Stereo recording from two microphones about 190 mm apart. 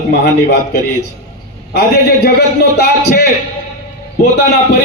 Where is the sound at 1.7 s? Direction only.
60° left (ahead or behind).